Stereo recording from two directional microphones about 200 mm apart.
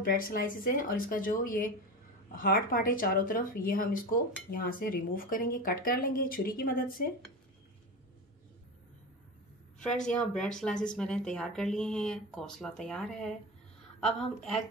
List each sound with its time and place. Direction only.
0.0 s speech: 45° left (ahead or behind)
9.8 s speech: 5° left (ahead or behind)